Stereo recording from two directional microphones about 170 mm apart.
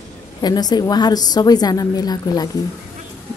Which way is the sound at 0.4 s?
25° left (ahead or behind).